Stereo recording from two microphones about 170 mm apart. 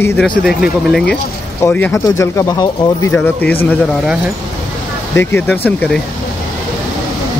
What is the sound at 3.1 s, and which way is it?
Speech, 10° left (ahead or behind).